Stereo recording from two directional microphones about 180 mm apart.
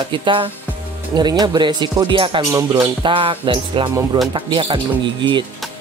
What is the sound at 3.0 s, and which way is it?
Speech, 30° right (ahead or behind).